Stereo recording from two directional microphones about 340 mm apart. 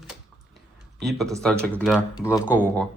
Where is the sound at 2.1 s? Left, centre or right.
Centre.